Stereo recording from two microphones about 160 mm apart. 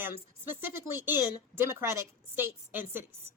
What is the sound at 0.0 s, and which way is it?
A woman's voice, 15° right (ahead or behind).